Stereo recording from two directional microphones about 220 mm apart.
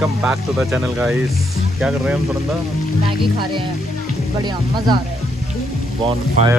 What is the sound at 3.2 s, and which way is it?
Speech, 20° right (ahead or behind).